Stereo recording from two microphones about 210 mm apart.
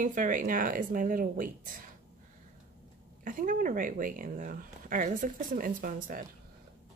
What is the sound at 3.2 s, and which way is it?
Speech, 40° right (ahead or behind).